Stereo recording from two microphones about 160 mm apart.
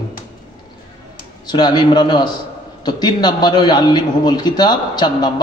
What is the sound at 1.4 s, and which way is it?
A man's voice, 25° left (ahead or behind).